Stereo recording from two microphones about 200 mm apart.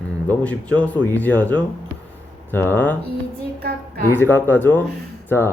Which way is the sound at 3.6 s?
50° right (ahead or behind).